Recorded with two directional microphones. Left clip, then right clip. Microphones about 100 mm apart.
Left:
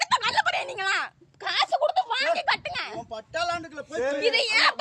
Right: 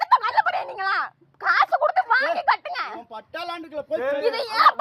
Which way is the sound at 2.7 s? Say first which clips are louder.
Right 3 dB; 80° left.